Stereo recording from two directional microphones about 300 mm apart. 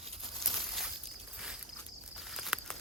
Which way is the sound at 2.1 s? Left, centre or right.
Centre.